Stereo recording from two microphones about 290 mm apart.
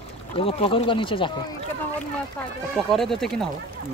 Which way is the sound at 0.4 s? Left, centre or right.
Centre.